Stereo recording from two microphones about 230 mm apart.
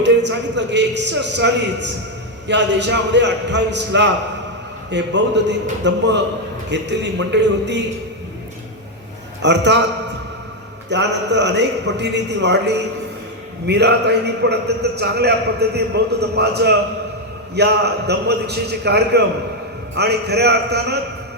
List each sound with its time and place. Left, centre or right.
0.0 s a man's voice: right
9.4 s a man's voice: right
10.8 s a man's voice: right